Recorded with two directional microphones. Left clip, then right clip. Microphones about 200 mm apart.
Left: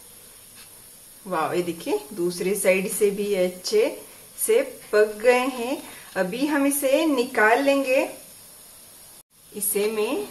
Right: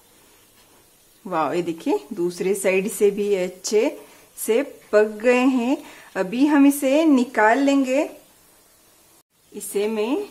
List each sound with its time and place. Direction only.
1.3 s speech: 45° right (ahead or behind)
9.7 s speech: 35° right (ahead or behind)